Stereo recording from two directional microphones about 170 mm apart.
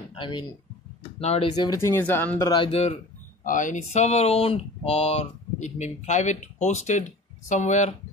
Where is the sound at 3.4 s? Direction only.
50° left (ahead or behind).